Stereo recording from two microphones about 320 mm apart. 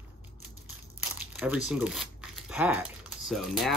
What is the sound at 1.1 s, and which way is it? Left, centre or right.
Speech, centre.